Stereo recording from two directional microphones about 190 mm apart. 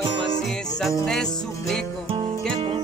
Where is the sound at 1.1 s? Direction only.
Centre (ahead or behind).